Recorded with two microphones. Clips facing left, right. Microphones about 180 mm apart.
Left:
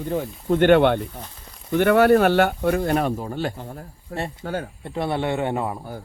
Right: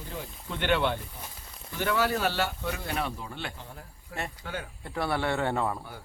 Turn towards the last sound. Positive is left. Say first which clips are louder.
# left 4 dB
turn(degrees=20)  # may be behind; listen again after turning